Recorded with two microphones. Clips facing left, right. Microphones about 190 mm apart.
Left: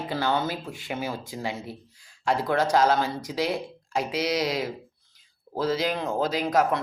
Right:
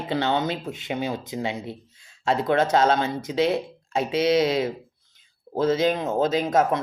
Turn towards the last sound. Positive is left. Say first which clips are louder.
# right 2 dB
turn(degrees=-25)  # may be behind; listen again after turning